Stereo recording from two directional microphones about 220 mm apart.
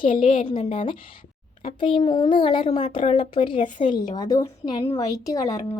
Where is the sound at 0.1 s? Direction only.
35° left (ahead or behind).